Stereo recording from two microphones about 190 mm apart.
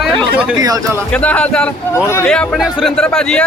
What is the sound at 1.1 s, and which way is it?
A man's voice, 5° left (ahead or behind).